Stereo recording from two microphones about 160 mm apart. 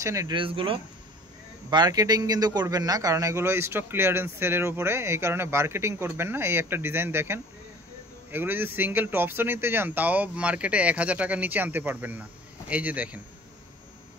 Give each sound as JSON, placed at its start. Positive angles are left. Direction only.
{"t": 0.0, "sound": "speech", "side_deg": -20}
{"t": 0.4, "sound": "a man's voice", "side_deg": -35}